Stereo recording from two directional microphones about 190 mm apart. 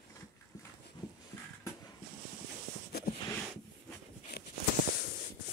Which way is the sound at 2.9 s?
55° left (ahead or behind).